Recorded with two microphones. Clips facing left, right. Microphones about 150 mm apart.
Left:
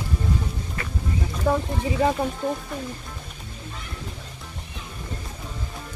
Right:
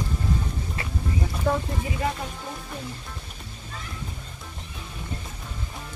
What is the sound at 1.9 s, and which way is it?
Speech, 30° left (ahead or behind).